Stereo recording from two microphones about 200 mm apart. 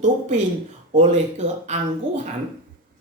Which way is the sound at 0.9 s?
35° right (ahead or behind).